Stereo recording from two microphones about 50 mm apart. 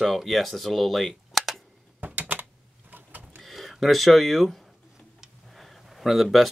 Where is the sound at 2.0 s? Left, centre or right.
Right.